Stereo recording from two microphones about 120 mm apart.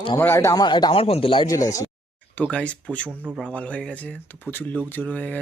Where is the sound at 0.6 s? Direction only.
40° left (ahead or behind).